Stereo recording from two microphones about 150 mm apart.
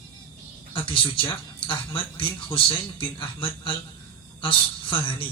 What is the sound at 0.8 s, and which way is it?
Speech, 35° left (ahead or behind).